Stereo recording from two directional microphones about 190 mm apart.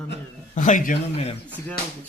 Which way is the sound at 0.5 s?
40° left (ahead or behind).